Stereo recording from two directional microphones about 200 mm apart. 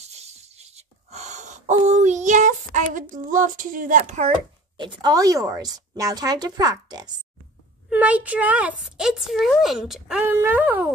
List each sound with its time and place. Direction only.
0.0 s a sound: 30° right (ahead or behind)
4.7 s a woman's voice: 20° right (ahead or behind)
7.9 s a woman's voice: 5° right (ahead or behind)